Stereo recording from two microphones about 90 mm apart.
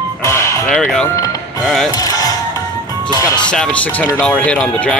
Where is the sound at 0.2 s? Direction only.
30° left (ahead or behind).